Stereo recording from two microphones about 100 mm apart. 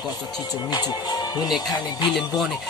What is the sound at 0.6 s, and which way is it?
Music, 45° left (ahead or behind).